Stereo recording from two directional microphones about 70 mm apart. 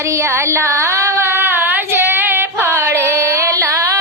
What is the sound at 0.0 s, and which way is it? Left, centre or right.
Child singing, right.